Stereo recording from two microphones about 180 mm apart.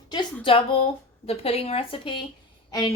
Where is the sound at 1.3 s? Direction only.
35° left (ahead or behind).